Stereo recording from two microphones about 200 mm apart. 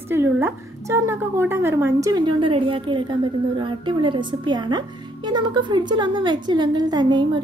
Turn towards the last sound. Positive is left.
turn(degrees=-20)  # may be behind; listen again after turning